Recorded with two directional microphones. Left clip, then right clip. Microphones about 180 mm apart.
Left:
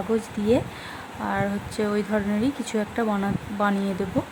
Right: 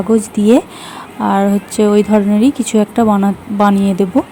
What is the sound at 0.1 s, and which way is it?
A woman's voice, 25° right (ahead or behind).